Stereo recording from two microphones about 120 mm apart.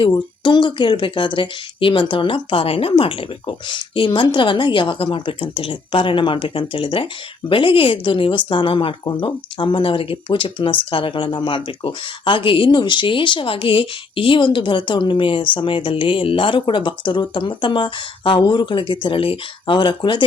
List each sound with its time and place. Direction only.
0.1 s speech: 40° left (ahead or behind)